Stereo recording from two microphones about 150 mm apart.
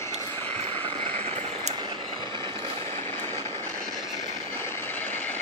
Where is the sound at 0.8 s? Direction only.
45° right (ahead or behind).